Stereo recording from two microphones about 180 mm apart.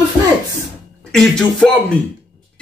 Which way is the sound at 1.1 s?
Centre (ahead or behind).